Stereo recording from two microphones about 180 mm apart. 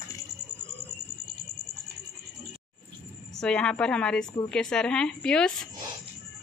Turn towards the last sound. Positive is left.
turn(degrees=5)  # may be behind; listen again after turning